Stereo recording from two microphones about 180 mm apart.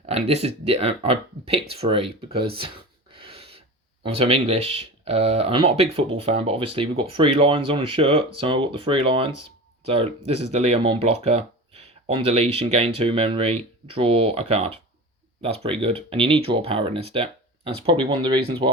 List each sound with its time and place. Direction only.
0.0 s speech: 35° right (ahead or behind)